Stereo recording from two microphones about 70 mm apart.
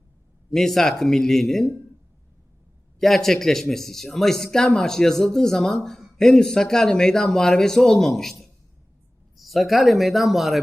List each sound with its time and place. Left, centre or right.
0.5 s speech: centre
3.0 s speech: centre